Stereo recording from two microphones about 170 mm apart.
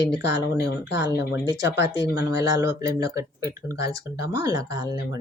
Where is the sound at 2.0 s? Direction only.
20° right (ahead or behind).